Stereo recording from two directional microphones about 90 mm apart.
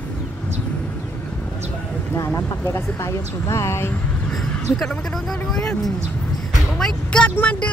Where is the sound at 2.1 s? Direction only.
30° left (ahead or behind).